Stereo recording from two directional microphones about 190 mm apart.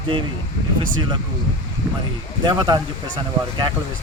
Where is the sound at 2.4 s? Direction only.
25° right (ahead or behind).